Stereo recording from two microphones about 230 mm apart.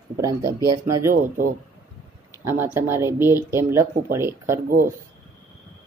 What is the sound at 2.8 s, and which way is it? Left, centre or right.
Speech, centre.